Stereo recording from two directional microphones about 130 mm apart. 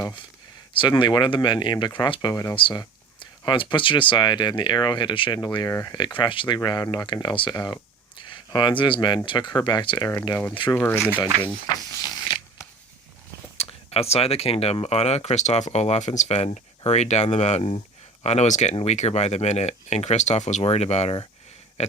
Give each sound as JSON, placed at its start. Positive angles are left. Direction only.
{"t": 0.7, "sound": "speech", "side_deg": 40}
{"t": 2.6, "sound": "speech", "side_deg": 40}
{"t": 10.8, "sound": "speech", "side_deg": 15}
{"t": 13.6, "sound": "speech", "side_deg": 50}
{"t": 18.7, "sound": "speech", "side_deg": 45}
{"t": 18.9, "sound": "speech", "side_deg": 55}
{"t": 20.6, "sound": "speech", "side_deg": 50}
{"t": 21.8, "sound": "a sound", "side_deg": 60}